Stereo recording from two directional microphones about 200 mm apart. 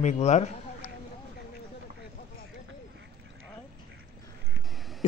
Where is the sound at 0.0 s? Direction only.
35° left (ahead or behind).